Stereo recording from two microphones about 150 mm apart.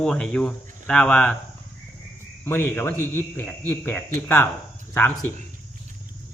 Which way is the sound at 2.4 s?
15° left (ahead or behind).